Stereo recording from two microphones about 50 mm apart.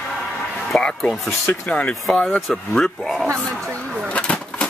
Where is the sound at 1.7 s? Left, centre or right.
Left.